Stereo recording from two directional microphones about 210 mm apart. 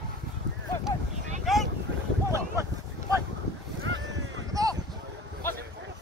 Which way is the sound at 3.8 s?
55° right (ahead or behind).